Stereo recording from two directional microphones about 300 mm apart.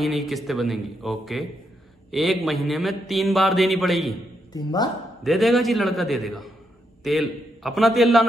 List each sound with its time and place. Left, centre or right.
0.0 s a man's voice: centre
4.6 s speech: centre
5.2 s a man's voice: centre